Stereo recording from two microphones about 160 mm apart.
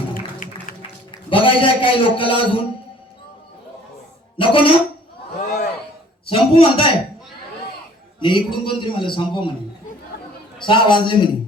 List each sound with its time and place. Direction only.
0.4 s music: 55° left (ahead or behind)
1.1 s a man's voice: 35° left (ahead or behind)
4.4 s a woman's voice: 35° left (ahead or behind)
6.2 s a man's voice: 35° left (ahead or behind)
8.2 s a man's voice: 30° left (ahead or behind)
10.6 s a man's voice: 30° left (ahead or behind)